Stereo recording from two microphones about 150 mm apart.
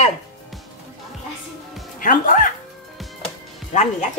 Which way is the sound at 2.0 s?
65° left (ahead or behind).